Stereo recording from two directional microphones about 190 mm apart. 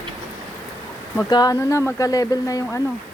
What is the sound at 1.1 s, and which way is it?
Speech, 20° left (ahead or behind).